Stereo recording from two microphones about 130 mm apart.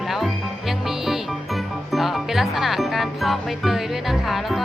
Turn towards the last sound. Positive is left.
turn(degrees=0)  # may be behind; listen again after turning